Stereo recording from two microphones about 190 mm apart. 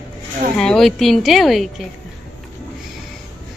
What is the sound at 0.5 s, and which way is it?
Speech, 5° left (ahead or behind).